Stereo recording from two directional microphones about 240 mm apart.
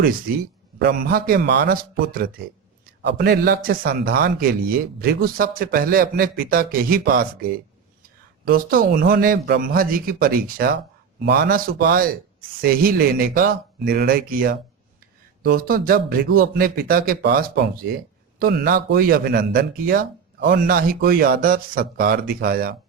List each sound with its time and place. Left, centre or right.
0.0 s a man's voice: right